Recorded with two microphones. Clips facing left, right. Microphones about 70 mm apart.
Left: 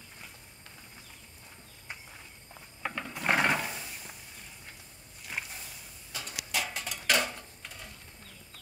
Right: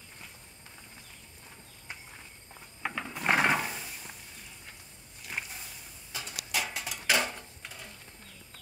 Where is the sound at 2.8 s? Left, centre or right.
Centre.